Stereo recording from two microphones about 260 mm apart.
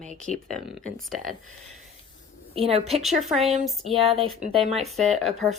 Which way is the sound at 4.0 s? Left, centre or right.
Right.